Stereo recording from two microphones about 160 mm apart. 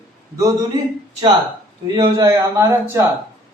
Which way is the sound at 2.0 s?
20° right (ahead or behind).